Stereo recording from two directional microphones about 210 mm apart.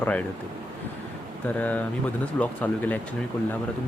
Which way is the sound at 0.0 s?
5° left (ahead or behind).